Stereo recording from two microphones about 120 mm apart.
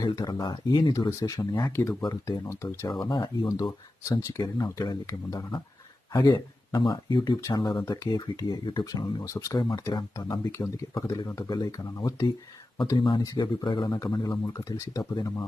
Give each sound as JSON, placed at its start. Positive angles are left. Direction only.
{"t": 0.0, "sound": "speech", "side_deg": 30}
{"t": 0.9, "sound": "speech", "side_deg": 30}
{"t": 3.0, "sound": "speech", "side_deg": 40}
{"t": 4.1, "sound": "speech", "side_deg": 30}